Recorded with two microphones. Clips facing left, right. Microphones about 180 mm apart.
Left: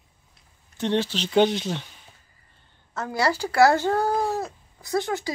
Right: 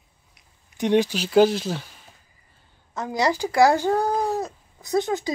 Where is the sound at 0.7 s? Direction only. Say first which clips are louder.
Right 4 dB; 15° right (ahead or behind).